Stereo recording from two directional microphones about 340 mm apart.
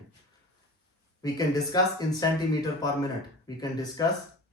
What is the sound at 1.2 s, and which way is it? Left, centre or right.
Speech, centre.